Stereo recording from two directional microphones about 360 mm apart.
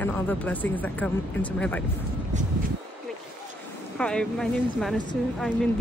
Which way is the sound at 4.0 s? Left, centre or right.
Centre.